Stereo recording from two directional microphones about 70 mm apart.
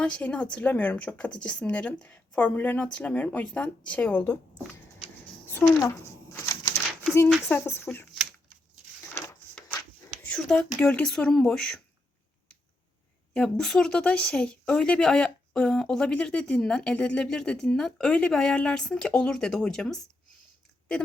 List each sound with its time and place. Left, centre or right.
0.0 s speech: centre
5.6 s speech: left
6.3 s a sound: left
7.5 s speech: left
9.6 s a sound: left
10.2 s speech: centre
13.3 s speech: centre